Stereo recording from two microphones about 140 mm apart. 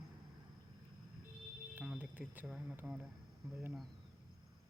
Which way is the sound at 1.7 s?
10° right (ahead or behind).